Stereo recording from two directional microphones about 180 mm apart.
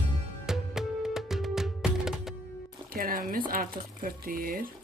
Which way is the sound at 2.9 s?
50° right (ahead or behind).